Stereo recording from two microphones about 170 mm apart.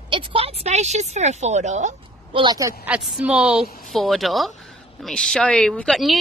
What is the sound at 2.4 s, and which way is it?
Speech, 20° right (ahead or behind).